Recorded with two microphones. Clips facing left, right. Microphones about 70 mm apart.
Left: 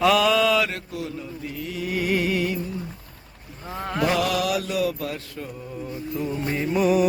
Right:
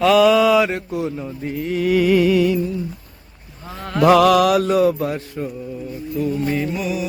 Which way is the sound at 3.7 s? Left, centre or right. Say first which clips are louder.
Right 6 dB; centre.